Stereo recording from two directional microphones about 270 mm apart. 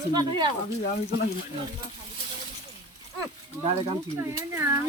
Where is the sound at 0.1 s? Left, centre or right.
Centre.